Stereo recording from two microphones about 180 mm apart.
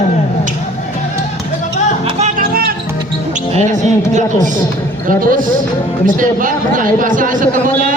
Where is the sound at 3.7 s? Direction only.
40° right (ahead or behind).